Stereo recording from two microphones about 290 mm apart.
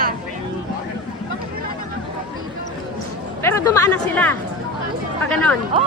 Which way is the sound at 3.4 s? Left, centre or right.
Centre.